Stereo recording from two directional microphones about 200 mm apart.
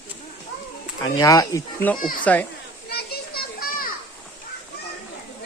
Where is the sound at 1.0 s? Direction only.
20° left (ahead or behind).